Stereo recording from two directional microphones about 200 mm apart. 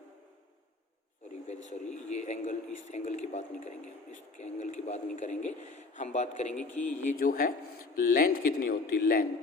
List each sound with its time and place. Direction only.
1.5 s speech: 35° left (ahead or behind)
6.5 s speech: 5° left (ahead or behind)
7.0 s speech: 45° left (ahead or behind)